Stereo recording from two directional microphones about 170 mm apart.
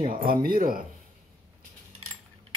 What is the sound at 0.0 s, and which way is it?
Speech, 55° right (ahead or behind).